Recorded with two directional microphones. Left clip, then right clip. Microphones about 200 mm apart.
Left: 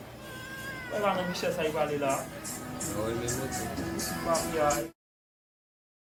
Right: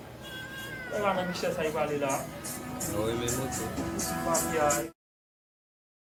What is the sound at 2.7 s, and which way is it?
Speech, 40° right (ahead or behind).